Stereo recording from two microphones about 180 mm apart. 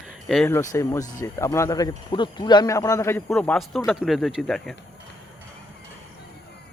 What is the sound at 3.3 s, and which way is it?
Speech, 5° left (ahead or behind).